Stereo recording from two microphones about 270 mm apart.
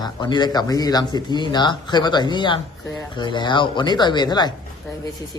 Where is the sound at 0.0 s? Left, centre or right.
Centre.